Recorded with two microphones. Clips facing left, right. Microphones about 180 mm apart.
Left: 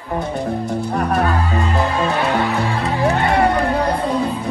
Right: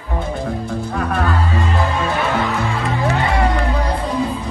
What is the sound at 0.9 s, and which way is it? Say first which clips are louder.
Speech: left 2 dB; 35° left (ahead or behind).